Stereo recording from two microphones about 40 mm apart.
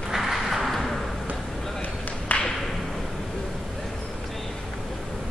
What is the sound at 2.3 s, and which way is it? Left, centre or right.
Thump, left.